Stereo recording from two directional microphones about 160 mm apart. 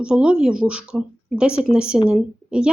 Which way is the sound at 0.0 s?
5° right (ahead or behind).